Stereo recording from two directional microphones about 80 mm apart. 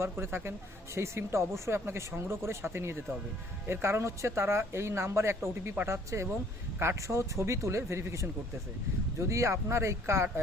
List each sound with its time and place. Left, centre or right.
0.0 s speech: right